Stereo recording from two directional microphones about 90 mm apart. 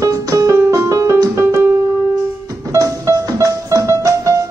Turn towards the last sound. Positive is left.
turn(degrees=-40)  # may be behind; listen again after turning